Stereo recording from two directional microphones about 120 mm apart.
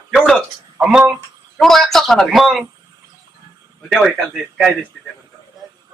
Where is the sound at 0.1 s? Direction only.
5° right (ahead or behind).